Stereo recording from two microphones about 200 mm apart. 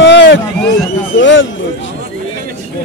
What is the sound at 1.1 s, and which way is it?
Speech, 70° left (ahead or behind).